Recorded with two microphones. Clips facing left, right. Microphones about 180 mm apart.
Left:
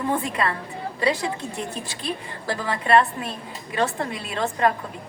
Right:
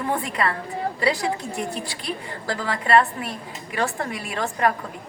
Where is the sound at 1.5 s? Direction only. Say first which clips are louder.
Right 2 dB; 15° right (ahead or behind).